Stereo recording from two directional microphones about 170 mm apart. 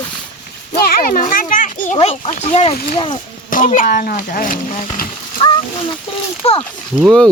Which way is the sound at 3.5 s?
50° left (ahead or behind).